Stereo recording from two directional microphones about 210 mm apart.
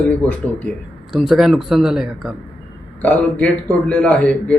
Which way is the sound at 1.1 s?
Centre (ahead or behind).